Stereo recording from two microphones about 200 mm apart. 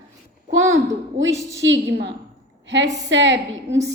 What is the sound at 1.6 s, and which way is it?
A woman's voice, 65° right (ahead or behind).